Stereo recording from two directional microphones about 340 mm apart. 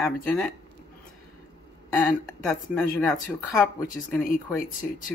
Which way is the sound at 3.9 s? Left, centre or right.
Left.